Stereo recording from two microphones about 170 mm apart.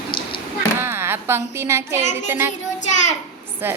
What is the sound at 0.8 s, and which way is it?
Speech, 15° right (ahead or behind).